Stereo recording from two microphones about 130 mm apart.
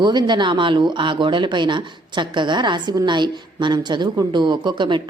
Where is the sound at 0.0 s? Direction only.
35° right (ahead or behind).